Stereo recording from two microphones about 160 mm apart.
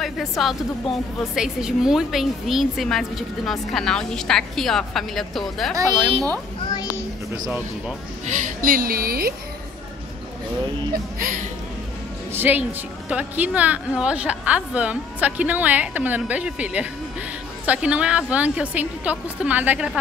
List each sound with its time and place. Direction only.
0.0 s a woman's voice: centre (ahead or behind)
8.3 s a woman's voice: 60° right (ahead or behind)
11.1 s a woman's voice: 60° right (ahead or behind)
12.3 s a woman's voice: 10° right (ahead or behind)